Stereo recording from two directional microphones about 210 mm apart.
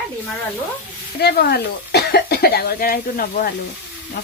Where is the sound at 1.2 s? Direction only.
50° left (ahead or behind).